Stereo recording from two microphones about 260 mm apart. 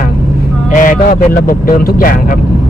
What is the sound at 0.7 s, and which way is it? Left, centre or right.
Speech, left.